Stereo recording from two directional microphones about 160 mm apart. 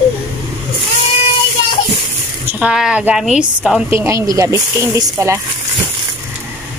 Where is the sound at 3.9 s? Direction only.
20° right (ahead or behind).